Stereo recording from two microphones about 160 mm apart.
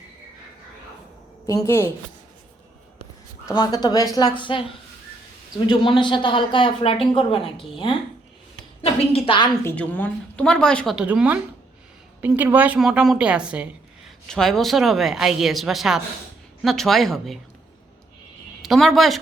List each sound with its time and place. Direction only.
1.5 s a woman's voice: 20° left (ahead or behind)
3.4 s a woman's voice: 25° left (ahead or behind)
9.0 s speech: 35° left (ahead or behind)
9.6 s a woman's voice: 10° left (ahead or behind)
10.9 s a woman's voice: 5° right (ahead or behind)
18.6 s speech: centre (ahead or behind)